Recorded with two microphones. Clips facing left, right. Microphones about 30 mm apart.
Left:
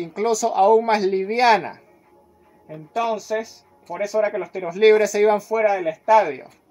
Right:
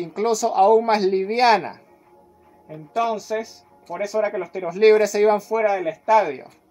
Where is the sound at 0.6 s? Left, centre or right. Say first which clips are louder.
Even; centre.